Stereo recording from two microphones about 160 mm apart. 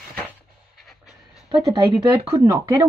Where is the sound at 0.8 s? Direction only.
Centre (ahead or behind).